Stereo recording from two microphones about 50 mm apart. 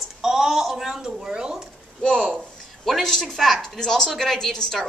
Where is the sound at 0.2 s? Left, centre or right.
Centre.